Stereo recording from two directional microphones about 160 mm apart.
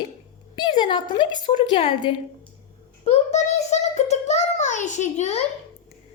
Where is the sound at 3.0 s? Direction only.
45° left (ahead or behind).